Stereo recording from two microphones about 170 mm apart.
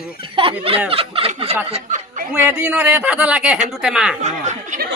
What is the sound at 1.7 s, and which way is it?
Speech, 45° right (ahead or behind).